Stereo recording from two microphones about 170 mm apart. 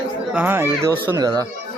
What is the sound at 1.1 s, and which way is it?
Speech, 25° right (ahead or behind).